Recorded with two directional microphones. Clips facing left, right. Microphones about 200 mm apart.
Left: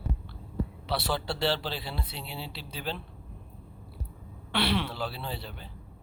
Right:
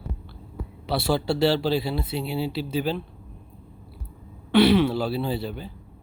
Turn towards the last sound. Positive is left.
turn(degrees=-10)  # may be behind; listen again after turning